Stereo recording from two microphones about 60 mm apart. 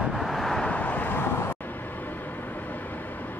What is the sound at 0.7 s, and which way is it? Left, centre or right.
Vehicle, left.